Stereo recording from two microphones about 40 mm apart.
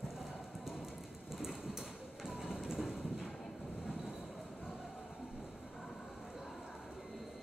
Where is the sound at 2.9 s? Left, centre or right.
Centre.